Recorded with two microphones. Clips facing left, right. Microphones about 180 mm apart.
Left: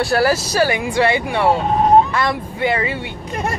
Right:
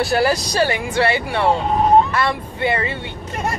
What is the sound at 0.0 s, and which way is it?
Speech, centre (ahead or behind).